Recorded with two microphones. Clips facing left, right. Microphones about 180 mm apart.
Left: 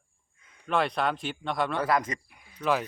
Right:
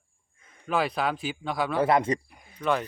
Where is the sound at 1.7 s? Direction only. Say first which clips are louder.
Right 4 dB; 25° right (ahead or behind).